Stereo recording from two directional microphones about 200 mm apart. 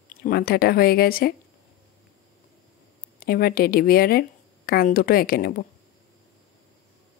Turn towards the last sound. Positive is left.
turn(degrees=50)  # may be behind; listen again after turning